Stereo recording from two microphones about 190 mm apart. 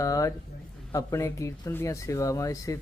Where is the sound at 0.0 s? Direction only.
15° left (ahead or behind).